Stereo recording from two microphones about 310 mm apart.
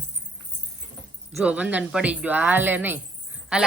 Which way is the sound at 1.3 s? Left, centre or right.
Centre.